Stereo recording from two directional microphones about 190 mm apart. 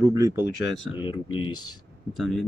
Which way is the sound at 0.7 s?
80° left.